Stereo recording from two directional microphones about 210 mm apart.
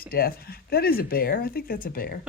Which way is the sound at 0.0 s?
45° left (ahead or behind).